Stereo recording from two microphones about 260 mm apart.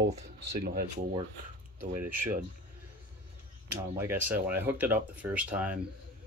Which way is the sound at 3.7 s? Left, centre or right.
Centre.